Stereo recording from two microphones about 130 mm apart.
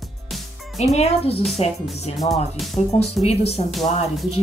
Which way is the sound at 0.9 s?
50° left (ahead or behind).